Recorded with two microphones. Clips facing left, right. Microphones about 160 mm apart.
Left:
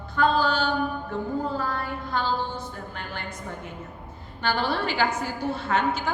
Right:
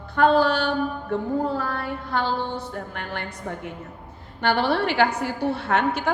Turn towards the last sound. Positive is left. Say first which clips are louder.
# right 3 dB
turn(degrees=-65)  # may be behind; listen again after turning